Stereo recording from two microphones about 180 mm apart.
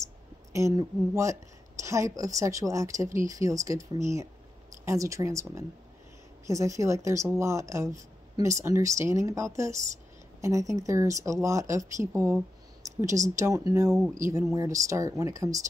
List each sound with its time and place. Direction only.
0.0 s speech: 15° right (ahead or behind)